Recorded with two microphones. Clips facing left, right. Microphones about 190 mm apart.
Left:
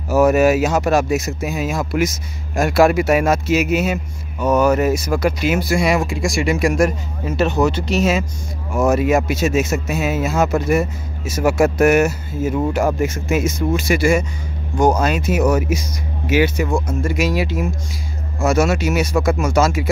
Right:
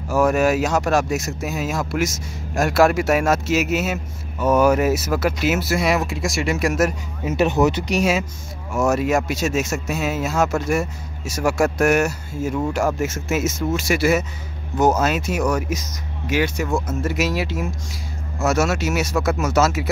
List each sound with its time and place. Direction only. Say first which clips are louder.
0.1 s speech: left 4 dB; 5° left (ahead or behind)
7.2 s speech: even; 15° right (ahead or behind)